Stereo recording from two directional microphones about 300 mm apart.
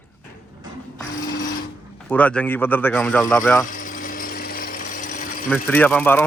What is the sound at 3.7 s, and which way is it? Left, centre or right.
Jackhammer, left.